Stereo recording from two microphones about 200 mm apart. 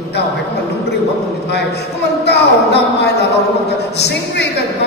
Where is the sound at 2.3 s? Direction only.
55° left (ahead or behind).